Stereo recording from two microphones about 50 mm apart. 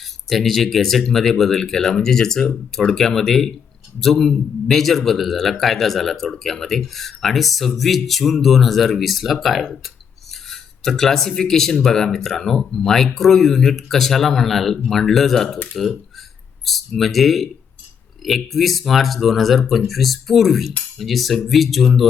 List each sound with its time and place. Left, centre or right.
0.0 s speech: centre